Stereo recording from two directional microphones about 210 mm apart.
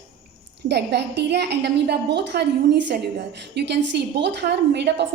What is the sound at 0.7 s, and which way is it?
A woman's voice, 55° right (ahead or behind).